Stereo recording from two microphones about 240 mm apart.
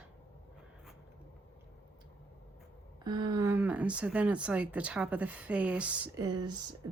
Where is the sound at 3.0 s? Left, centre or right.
Centre.